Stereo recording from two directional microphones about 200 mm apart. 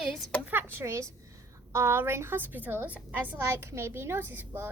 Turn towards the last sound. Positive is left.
turn(degrees=-10)  # may be behind; listen again after turning